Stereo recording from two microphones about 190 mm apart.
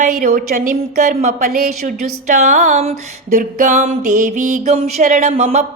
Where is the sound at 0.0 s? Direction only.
45° right (ahead or behind).